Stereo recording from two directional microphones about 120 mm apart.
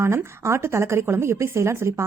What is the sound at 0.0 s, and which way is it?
Speech, 20° right (ahead or behind).